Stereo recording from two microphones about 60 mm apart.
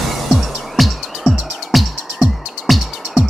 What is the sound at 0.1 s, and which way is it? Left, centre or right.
Music, centre.